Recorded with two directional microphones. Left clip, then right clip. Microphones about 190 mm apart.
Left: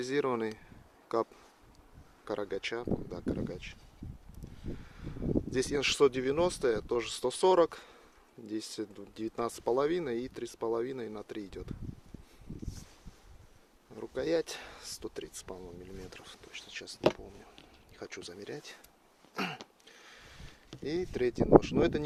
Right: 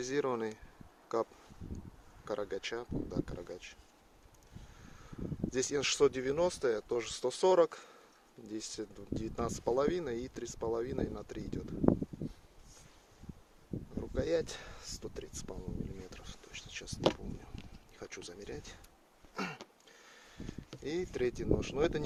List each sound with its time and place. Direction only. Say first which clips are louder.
0.0 s speech: left 3 dB; 25° left (ahead or behind)
4.9 s speech: left 9 dB; 25° left (ahead or behind)
14.0 s speech: left 2 dB; 30° left (ahead or behind)
18.0 s speech: left 3 dB; 20° left (ahead or behind)
19.3 s a sound: left 4 dB; 40° left (ahead or behind)
20.8 s speech: left 3 dB; 15° left (ahead or behind)